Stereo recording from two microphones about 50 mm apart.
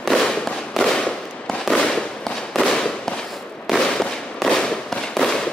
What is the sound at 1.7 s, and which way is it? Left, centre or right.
Fireworks, centre.